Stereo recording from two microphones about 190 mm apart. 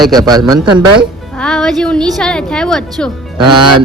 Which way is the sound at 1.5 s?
5° left (ahead or behind).